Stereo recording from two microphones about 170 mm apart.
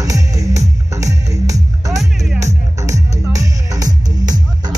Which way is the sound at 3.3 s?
20° right (ahead or behind).